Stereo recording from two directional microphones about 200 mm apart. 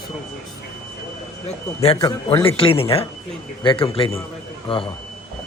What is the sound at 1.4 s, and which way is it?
A man's voice, 30° left (ahead or behind).